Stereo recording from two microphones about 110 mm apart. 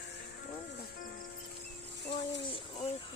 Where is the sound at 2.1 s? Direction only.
70° left (ahead or behind).